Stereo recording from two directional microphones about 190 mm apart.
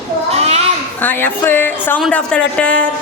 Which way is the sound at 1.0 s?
10° left (ahead or behind).